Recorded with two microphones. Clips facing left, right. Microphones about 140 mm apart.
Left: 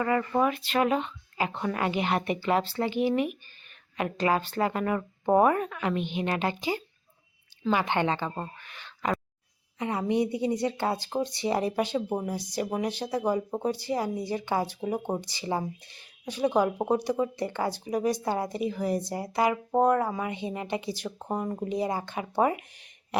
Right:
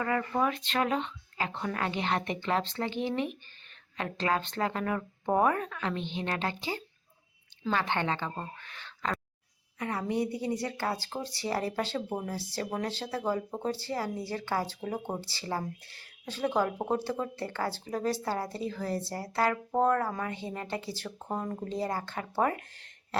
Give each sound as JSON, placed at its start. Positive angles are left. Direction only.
{"t": 0.3, "sound": "speech", "side_deg": 10}
{"t": 8.6, "sound": "a sound", "side_deg": 15}
{"t": 9.7, "sound": "speech", "side_deg": 20}